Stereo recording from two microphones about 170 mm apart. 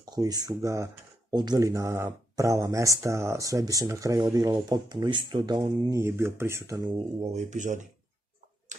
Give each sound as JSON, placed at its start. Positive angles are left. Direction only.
{"t": 0.0, "sound": "speech", "side_deg": -20}
{"t": 7.3, "sound": "speech", "side_deg": -45}